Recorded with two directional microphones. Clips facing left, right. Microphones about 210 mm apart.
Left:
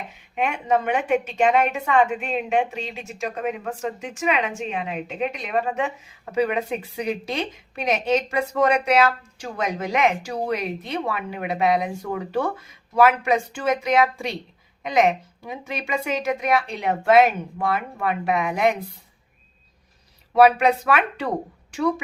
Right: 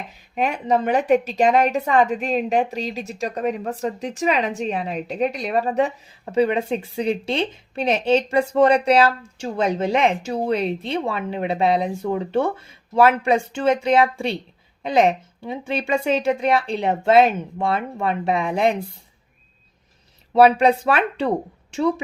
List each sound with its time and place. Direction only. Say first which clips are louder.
0.1 s a woman's voice: right 2 dB; 35° right (ahead or behind)
20.3 s a woman's voice: right 2 dB; 30° right (ahead or behind)